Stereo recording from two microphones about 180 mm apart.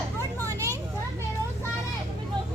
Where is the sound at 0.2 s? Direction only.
15° right (ahead or behind).